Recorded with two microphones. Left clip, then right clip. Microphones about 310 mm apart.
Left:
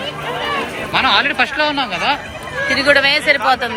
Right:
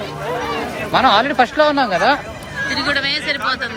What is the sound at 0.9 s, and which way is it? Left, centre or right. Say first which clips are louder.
Speech: right 1 dB; right.